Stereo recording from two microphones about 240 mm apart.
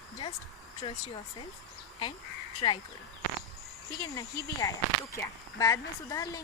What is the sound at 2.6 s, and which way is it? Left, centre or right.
Speech, left.